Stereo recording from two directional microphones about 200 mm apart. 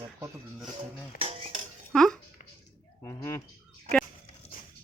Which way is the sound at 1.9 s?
Centre (ahead or behind).